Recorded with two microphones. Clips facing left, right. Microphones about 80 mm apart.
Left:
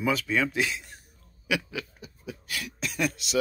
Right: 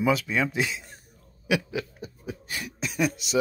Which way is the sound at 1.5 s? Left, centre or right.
Right.